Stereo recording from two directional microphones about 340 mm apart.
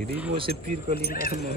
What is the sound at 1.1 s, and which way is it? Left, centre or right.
Speech, left.